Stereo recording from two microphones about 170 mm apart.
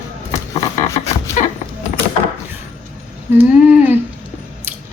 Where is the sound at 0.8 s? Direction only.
45° left (ahead or behind).